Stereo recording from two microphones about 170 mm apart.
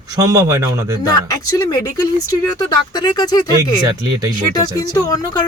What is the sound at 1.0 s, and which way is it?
Speech, 20° left (ahead or behind).